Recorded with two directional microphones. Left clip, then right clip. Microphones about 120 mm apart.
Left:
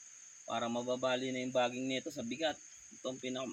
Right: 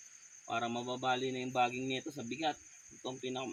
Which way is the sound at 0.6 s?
20° left (ahead or behind).